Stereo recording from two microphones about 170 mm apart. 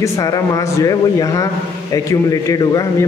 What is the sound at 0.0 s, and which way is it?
A man's voice, 20° left (ahead or behind).